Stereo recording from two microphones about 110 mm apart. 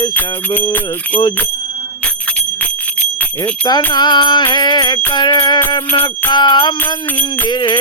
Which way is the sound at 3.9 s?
40° left (ahead or behind).